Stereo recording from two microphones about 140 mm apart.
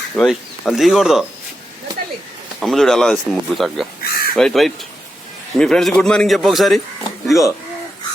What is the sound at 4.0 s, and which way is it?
Crow, 90° left.